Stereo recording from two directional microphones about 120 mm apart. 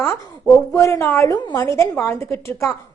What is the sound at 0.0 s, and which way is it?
A woman's voice, 20° left (ahead or behind).